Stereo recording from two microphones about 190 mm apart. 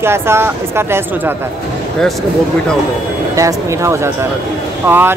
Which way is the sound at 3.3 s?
15° right (ahead or behind).